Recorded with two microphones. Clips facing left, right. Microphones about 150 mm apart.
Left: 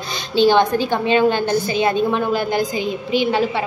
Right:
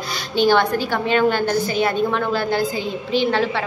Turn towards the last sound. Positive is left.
turn(degrees=15)  # may be behind; listen again after turning